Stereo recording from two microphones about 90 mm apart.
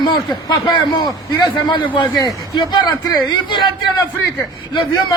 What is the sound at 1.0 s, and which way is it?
A man's voice, 55° left (ahead or behind).